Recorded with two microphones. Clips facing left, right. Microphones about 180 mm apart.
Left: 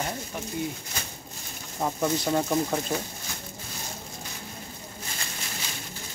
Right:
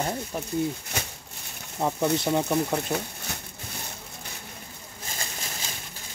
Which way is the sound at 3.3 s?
65° right (ahead or behind).